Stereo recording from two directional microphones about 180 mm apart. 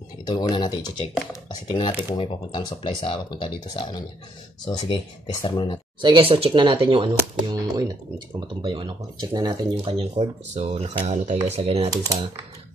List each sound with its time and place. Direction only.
0.3 s speech: 25° left (ahead or behind)
2.0 s speech: 25° left (ahead or behind)
5.9 s speech: 25° right (ahead or behind)